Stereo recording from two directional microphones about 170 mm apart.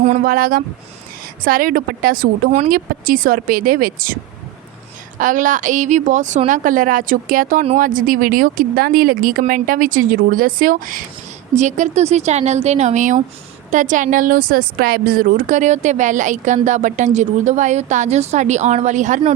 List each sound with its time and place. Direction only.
0.0 s speech: 50° right (ahead or behind)
5.2 s speech: 50° right (ahead or behind)
11.5 s speech: 40° right (ahead or behind)